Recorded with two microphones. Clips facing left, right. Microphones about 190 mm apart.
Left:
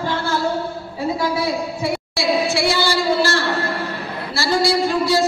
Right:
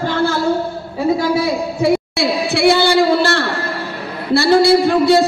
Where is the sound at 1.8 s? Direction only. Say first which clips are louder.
Right 8 dB; 60° right (ahead or behind).